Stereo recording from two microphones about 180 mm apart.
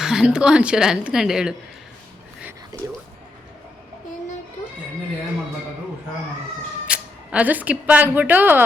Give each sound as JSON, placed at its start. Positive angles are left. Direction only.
{"t": 0.0, "sound": "speech", "side_deg": -5}
{"t": 6.8, "sound": "speech", "side_deg": -5}